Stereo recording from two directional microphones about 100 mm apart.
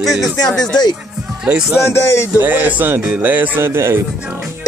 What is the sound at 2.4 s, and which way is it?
Speech, 20° right (ahead or behind).